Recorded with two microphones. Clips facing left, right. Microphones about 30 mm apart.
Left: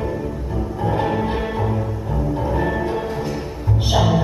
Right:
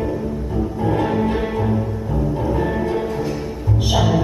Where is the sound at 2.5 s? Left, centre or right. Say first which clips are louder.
Even; centre.